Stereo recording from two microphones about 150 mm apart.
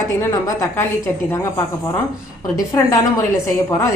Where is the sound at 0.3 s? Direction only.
20° left (ahead or behind).